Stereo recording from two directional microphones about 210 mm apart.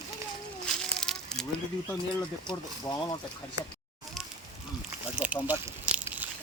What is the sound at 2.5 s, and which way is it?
Speech, 20° left (ahead or behind).